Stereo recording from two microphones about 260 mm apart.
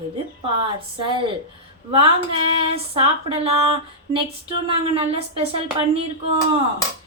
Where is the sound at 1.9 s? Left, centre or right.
Right.